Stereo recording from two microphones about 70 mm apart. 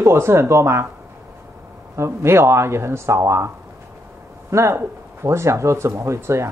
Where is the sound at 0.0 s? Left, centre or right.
Right.